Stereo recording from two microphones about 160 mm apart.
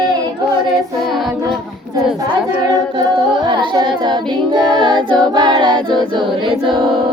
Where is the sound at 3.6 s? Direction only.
30° right (ahead or behind).